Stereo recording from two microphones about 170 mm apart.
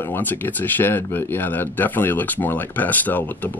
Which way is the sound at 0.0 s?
10° left (ahead or behind).